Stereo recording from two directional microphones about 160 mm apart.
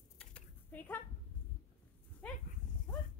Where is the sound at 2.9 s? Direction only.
10° left (ahead or behind).